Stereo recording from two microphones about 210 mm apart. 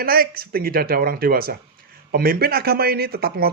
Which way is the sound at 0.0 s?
45° right (ahead or behind).